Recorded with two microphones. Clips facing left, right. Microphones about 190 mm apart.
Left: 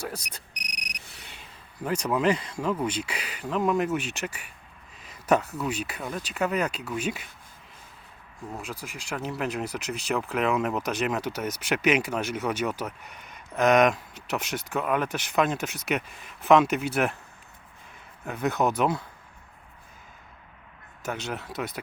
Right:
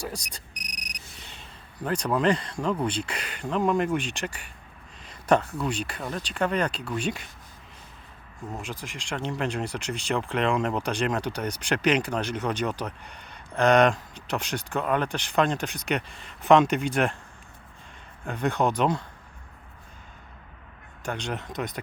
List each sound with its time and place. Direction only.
0.1 s speech: 5° left (ahead or behind)
5.0 s a sound: 5° left (ahead or behind)
5.6 s speech: 5° left (ahead or behind)
8.8 s speech: 5° left (ahead or behind)
18.3 s speech: 5° left (ahead or behind)
21.0 s speech: 5° left (ahead or behind)